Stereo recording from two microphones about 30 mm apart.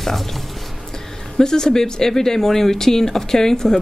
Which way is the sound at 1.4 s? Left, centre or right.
Left.